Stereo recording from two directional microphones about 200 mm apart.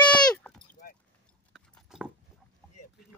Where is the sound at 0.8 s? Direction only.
45° left (ahead or behind).